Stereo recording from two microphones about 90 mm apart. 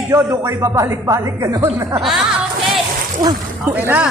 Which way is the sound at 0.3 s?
35° right (ahead or behind).